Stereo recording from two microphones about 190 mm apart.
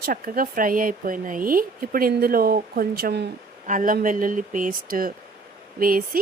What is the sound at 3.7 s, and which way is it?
Speech, 45° right (ahead or behind).